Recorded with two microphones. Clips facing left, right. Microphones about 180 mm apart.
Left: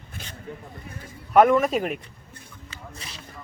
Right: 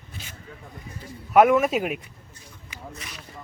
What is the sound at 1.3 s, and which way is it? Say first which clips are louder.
Speech: even; 5° right (ahead or behind).